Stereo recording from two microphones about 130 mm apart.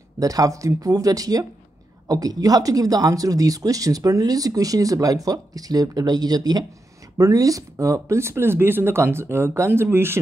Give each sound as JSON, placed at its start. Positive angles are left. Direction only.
{"t": 0.2, "sound": "speech", "side_deg": -25}